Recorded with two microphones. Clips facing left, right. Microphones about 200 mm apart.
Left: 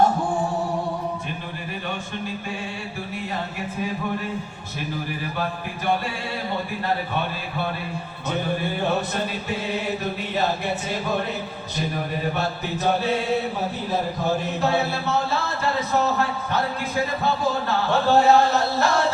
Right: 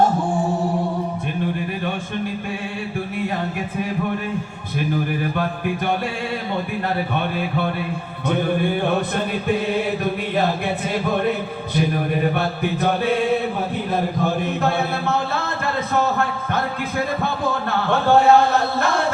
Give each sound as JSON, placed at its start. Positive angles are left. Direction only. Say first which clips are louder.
{"t": 7.2, "sound": "music", "louder": "right 5 dB", "side_deg": -55}
{"t": 14.6, "sound": "a man's voice", "louder": "right 1 dB", "side_deg": -55}
{"t": 17.2, "sound": "a sound", "louder": "even", "side_deg": -55}